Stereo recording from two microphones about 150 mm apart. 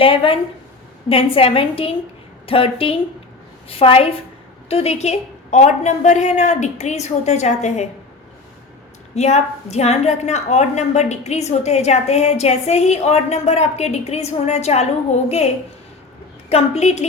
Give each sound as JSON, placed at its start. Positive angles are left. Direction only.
{"t": 0.0, "sound": "a woman's voice", "side_deg": 40}
{"t": 9.1, "sound": "a woman's voice", "side_deg": 45}